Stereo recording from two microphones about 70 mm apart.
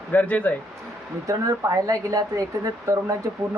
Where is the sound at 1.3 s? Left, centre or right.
Right.